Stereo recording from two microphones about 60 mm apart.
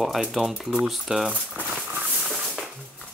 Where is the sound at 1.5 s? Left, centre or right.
Right.